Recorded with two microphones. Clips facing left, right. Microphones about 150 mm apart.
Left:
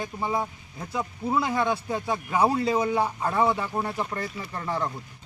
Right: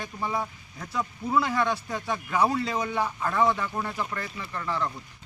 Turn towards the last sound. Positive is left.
turn(degrees=35)  # may be behind; listen again after turning